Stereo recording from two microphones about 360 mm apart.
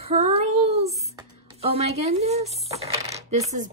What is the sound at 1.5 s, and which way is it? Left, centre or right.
Coin, centre.